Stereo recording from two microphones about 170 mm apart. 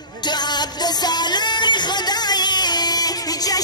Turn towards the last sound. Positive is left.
turn(degrees=25)  # may be behind; listen again after turning